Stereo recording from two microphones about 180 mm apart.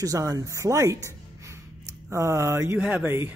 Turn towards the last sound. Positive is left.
turn(degrees=-10)  # may be behind; listen again after turning